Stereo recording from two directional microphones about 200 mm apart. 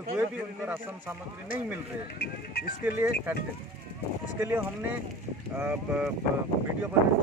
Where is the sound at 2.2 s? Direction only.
50° left (ahead or behind).